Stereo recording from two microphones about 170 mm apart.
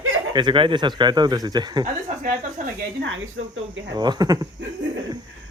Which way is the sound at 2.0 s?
50° right (ahead or behind).